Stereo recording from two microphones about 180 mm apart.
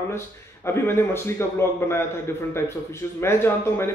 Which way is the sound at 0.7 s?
15° left (ahead or behind).